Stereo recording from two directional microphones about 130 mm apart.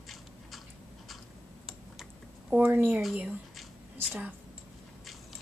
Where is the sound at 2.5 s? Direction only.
15° right (ahead or behind).